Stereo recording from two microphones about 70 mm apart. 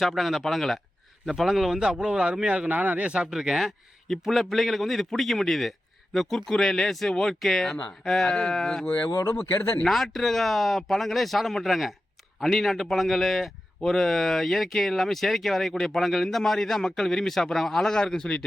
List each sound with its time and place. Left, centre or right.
0.0 s a man's voice: centre
2.6 s a man's voice: right; by 8.9 s centre
9.2 s speech: left
9.8 s a man's voice: centre